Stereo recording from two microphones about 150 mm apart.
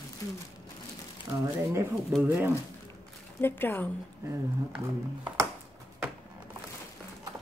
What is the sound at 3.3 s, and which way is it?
Speech, 15° left (ahead or behind).